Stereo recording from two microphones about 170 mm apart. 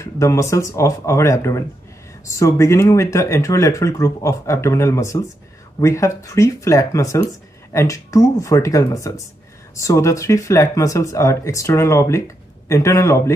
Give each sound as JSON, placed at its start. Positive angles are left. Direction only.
{"t": 0.0, "sound": "speech", "side_deg": 15}